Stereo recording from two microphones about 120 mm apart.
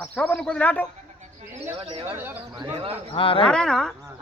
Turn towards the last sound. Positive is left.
turn(degrees=5)  # may be behind; listen again after turning